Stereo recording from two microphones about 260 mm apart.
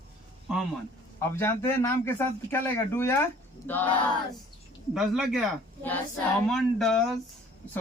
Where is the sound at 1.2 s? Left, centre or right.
Centre.